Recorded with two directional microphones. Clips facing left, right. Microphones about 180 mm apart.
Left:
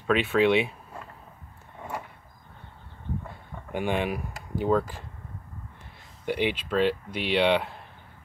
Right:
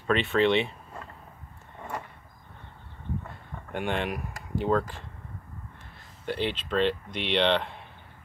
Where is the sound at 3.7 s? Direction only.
5° left (ahead or behind).